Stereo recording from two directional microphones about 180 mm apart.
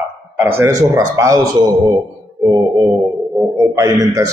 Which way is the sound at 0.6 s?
20° right (ahead or behind).